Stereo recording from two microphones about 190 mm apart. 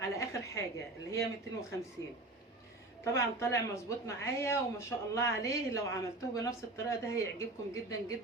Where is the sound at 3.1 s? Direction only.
15° left (ahead or behind).